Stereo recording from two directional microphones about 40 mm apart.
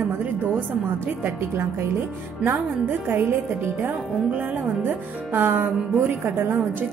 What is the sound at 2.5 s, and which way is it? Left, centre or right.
A woman's voice, right.